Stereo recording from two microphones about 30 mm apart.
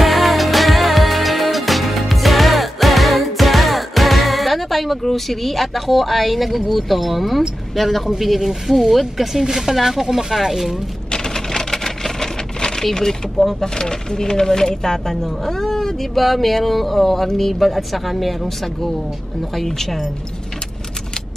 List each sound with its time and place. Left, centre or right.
0.0 s music: centre
7.7 s a man's voice: centre
8.2 s speech: centre
11.1 s typewriter: left
12.5 s a sound: left
12.8 s speech: centre
19.5 s speech: centre